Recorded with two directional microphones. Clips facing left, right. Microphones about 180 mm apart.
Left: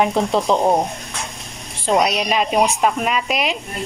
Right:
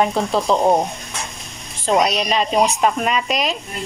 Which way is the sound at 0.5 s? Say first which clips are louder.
Right 1 dB; 15° left (ahead or behind).